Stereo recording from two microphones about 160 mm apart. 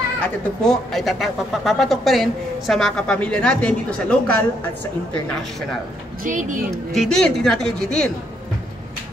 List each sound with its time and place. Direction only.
0.2 s speech: 5° left (ahead or behind)
6.2 s a woman's voice: 55° right (ahead or behind)
6.9 s speech: centre (ahead or behind)